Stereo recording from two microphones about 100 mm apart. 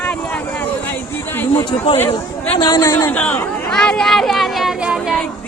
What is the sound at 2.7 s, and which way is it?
Speech, 35° left (ahead or behind).